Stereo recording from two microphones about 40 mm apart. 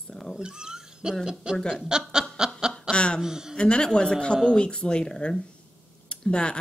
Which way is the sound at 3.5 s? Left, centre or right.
Left.